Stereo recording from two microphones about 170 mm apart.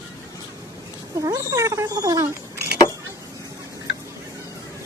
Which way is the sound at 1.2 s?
20° right (ahead or behind).